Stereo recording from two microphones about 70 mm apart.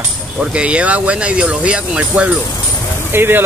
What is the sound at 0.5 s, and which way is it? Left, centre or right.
Speech, centre.